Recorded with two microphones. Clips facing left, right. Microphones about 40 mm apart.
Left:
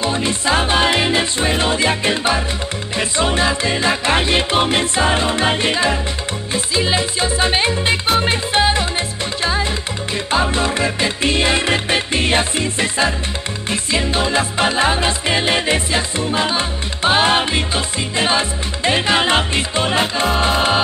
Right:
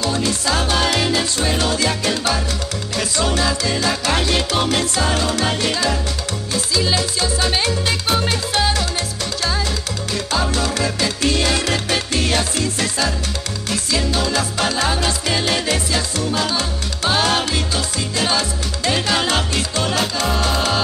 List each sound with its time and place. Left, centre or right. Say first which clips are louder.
0.0 s music: left 2 dB; left